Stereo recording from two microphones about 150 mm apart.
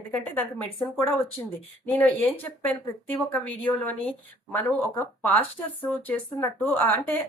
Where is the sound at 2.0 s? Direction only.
10° left (ahead or behind).